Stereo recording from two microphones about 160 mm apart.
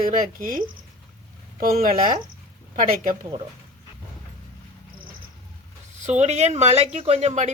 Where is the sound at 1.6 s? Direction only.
65° right (ahead or behind).